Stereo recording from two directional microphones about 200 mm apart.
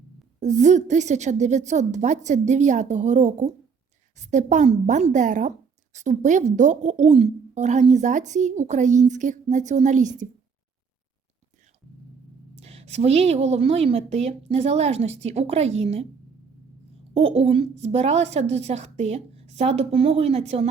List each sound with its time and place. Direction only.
0.3 s speech: 35° right (ahead or behind)
12.5 s speech: 30° right (ahead or behind)